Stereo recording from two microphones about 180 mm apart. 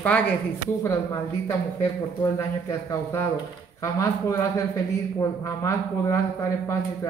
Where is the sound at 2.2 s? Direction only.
20° left (ahead or behind).